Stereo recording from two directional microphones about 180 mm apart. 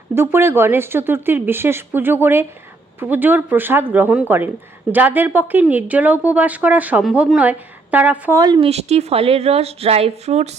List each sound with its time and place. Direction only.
0.1 s speech: 15° right (ahead or behind)
8.7 s a woman's voice: 35° right (ahead or behind)